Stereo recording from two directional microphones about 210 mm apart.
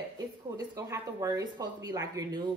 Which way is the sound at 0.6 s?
15° right (ahead or behind).